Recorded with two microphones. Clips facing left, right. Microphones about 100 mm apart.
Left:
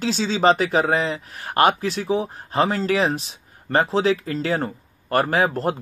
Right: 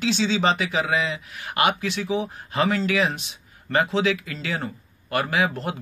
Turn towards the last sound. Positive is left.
turn(degrees=40)  # may be behind; listen again after turning